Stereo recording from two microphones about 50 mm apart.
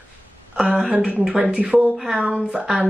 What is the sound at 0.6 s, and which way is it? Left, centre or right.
Speech, centre.